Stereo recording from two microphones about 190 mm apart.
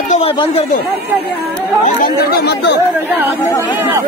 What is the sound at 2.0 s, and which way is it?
Speech, 55° left (ahead or behind).